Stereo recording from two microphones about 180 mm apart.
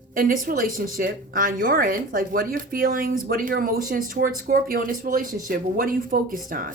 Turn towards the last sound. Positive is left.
turn(degrees=-50)  # may be behind; listen again after turning